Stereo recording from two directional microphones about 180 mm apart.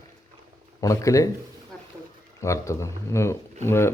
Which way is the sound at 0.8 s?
20° left (ahead or behind).